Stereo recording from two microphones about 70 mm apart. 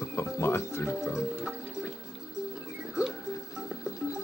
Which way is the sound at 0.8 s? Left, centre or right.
Centre.